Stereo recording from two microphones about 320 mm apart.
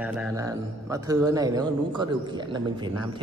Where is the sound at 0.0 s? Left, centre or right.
Centre.